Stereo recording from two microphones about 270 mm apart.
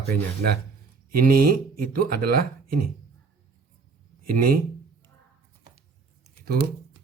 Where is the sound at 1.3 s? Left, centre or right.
Right.